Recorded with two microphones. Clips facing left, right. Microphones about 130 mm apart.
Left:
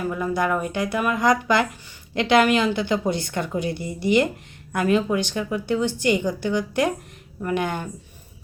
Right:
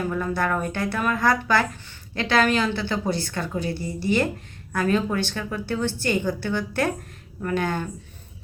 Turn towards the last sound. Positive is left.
turn(degrees=15)  # may be behind; listen again after turning